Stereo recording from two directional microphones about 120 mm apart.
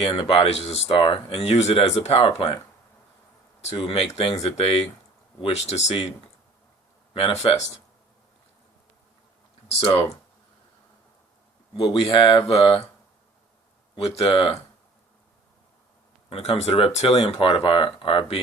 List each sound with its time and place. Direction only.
0.0 s speech: 50° left (ahead or behind)
3.8 s speech: 50° left (ahead or behind)
5.4 s speech: 60° left (ahead or behind)
7.1 s speech: 55° left (ahead or behind)
9.8 s speech: 50° left (ahead or behind)
11.8 s speech: 45° left (ahead or behind)
14.2 s speech: 45° left (ahead or behind)
16.3 s speech: 60° left (ahead or behind)